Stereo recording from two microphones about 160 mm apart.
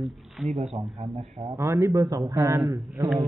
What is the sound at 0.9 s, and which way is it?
A man's voice, 30° right (ahead or behind).